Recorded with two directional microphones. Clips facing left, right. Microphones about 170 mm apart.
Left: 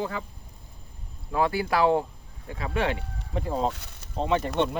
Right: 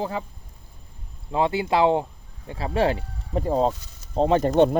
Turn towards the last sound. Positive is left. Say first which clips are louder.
# right 7 dB
turn(degrees=-40)  # may be behind; listen again after turning